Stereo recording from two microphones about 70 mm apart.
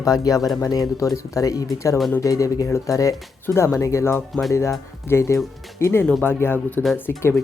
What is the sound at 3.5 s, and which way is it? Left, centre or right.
Speech, left.